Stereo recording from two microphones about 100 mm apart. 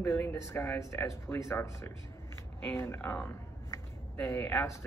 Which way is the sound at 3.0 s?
15° left (ahead or behind).